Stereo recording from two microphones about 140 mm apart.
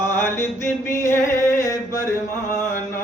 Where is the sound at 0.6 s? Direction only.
20° left (ahead or behind).